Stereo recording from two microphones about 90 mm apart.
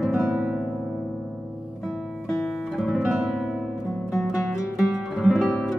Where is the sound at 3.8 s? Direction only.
35° left (ahead or behind).